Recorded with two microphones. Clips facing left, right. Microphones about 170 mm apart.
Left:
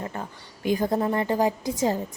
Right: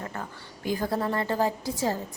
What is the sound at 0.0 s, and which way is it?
Speech, 20° left (ahead or behind).